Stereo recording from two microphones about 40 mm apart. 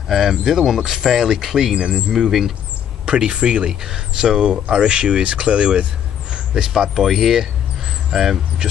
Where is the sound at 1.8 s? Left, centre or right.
Right.